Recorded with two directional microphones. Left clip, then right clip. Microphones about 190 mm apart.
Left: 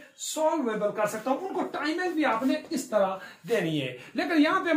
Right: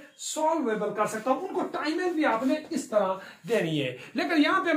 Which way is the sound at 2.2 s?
Centre (ahead or behind).